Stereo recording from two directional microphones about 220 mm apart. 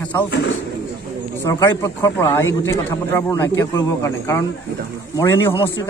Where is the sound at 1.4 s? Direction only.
15° left (ahead or behind).